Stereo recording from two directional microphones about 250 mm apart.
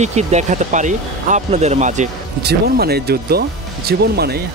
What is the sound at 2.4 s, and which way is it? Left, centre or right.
Speech, right.